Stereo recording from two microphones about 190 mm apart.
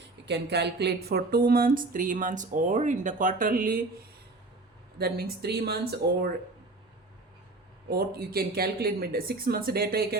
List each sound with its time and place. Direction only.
0.3 s speech: 60° right (ahead or behind)
4.9 s speech: 55° right (ahead or behind)
7.9 s speech: 55° right (ahead or behind)